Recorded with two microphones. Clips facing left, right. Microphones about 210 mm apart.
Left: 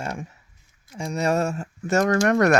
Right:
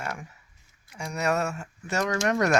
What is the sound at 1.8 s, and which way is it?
Speech, 50° left (ahead or behind).